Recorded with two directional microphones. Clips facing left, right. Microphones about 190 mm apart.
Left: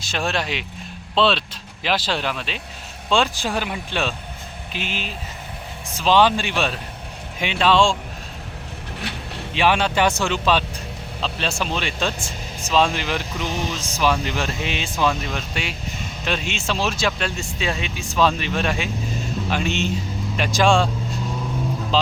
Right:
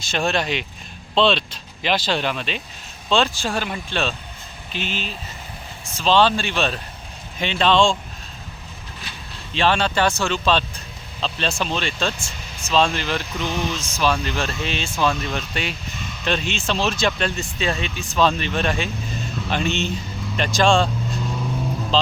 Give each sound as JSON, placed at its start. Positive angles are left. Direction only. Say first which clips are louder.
{"t": 0.0, "sound": "speech", "louder": "right 2 dB", "side_deg": 5}
{"t": 3.1, "sound": "speech", "louder": "even", "side_deg": 15}
{"t": 9.0, "sound": "vehicle", "louder": "left 9 dB", "side_deg": 65}
{"t": 9.6, "sound": "speech", "louder": "even", "side_deg": 10}
{"t": 12.2, "sound": "vehicle", "louder": "left 4 dB", "side_deg": 35}
{"t": 12.7, "sound": "speech", "louder": "even", "side_deg": 15}
{"t": 13.4, "sound": "music", "louder": "right 1 dB", "side_deg": 40}
{"t": 13.9, "sound": "speech", "louder": "left 1 dB", "side_deg": 15}